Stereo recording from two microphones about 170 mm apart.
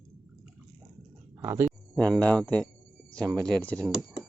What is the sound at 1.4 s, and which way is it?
Speech, 15° right (ahead or behind).